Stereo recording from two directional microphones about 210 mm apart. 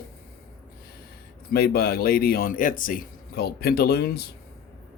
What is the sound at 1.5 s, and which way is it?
A man's voice, 45° left (ahead or behind).